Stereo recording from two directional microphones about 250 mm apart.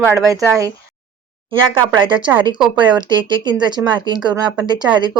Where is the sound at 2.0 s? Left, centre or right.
Centre.